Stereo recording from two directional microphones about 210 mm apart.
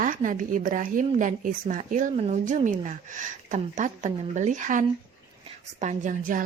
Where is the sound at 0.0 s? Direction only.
40° right (ahead or behind).